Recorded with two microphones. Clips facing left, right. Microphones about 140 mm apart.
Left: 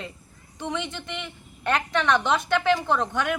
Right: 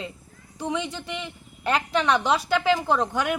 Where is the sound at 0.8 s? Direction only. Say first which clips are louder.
Right 2 dB; 35° right (ahead or behind).